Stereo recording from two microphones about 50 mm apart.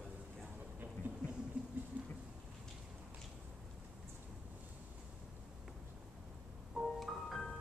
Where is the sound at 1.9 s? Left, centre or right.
Right.